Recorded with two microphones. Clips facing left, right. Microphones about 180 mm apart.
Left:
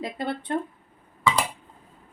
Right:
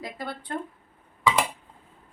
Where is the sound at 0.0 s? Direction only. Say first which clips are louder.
Left 6 dB; 25° left (ahead or behind).